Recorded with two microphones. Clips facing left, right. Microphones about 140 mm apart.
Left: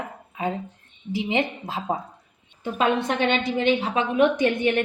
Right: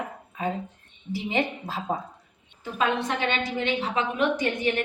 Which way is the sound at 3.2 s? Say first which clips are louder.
Left 8 dB; 65° left (ahead or behind).